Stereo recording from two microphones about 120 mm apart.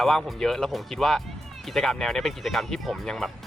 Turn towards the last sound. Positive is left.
turn(degrees=0)  # may be behind; listen again after turning